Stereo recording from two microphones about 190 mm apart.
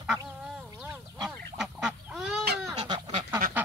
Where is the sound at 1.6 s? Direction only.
5° right (ahead or behind).